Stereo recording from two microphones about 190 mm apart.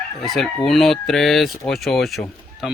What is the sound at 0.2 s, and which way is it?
Chicken, centre (ahead or behind).